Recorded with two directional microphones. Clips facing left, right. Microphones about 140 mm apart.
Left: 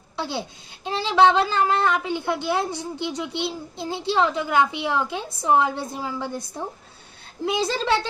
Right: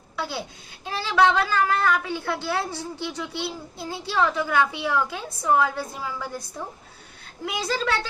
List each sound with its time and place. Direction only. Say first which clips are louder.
0.2 s a woman's voice: left 2 dB; 25° left (ahead or behind)
7.4 s a woman's voice: left 4 dB; 25° left (ahead or behind)